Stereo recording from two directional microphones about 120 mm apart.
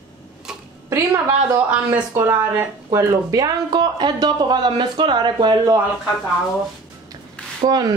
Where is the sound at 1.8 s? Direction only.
25° right (ahead or behind).